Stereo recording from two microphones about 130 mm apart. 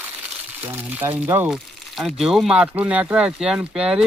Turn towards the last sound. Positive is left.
turn(degrees=-5)  # may be behind; listen again after turning